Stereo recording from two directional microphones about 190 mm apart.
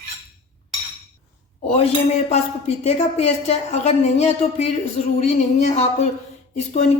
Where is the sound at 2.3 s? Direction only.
35° left (ahead or behind).